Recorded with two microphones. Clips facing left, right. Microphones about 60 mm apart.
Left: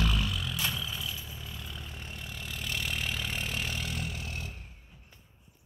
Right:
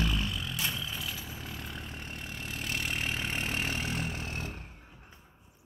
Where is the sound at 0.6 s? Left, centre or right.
Centre.